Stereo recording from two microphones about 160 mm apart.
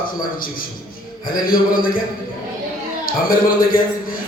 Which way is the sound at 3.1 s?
60° left (ahead or behind).